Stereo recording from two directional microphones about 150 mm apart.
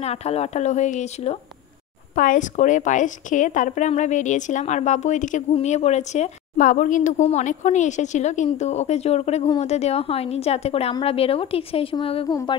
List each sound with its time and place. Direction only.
0.0 s a woman's voice: 45° left (ahead or behind)
2.1 s a woman's voice: 60° left (ahead or behind); by 12.3 s 35° left (ahead or behind)
12.3 s music: 25° left (ahead or behind)